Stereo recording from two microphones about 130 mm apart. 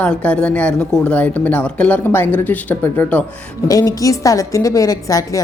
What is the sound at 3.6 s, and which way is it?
A woman's voice, 30° left (ahead or behind).